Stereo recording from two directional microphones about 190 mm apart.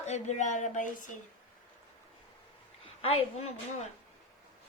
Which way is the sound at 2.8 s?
30° left (ahead or behind).